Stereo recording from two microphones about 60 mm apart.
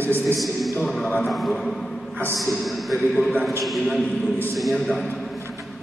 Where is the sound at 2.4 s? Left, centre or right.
Centre.